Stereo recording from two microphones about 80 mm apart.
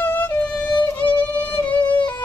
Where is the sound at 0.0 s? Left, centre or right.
Left.